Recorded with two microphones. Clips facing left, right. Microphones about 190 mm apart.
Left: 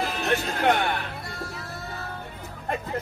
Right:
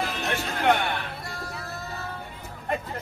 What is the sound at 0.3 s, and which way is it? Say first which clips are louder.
Speech: left 1 dB; 40° left (ahead or behind).